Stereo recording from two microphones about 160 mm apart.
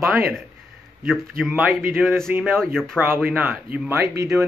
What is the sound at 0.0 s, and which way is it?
A man's voice, 5° right (ahead or behind).